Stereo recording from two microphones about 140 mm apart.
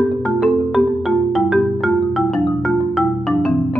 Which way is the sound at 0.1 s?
Centre (ahead or behind).